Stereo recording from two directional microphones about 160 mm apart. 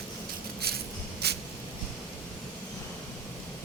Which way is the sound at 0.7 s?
75° right (ahead or behind).